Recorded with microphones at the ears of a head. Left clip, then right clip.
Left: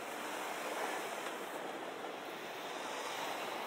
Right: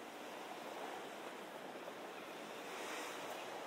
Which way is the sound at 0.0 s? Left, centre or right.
Left.